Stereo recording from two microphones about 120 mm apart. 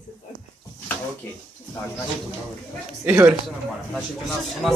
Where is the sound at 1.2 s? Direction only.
20° left (ahead or behind).